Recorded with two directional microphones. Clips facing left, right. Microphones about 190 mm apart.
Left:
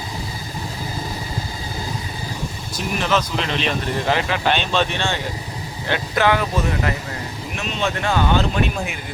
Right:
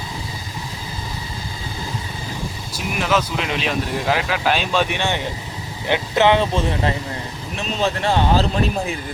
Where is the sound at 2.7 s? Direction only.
5° right (ahead or behind).